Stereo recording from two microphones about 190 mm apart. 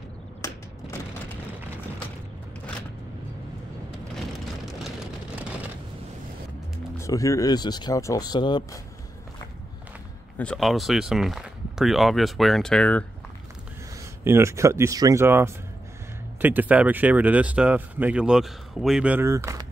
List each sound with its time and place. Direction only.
0.4 s a sound: 15° left (ahead or behind)
7.0 s speech: 15° left (ahead or behind)
10.3 s speech: 5° left (ahead or behind)
14.2 s speech: 15° right (ahead or behind)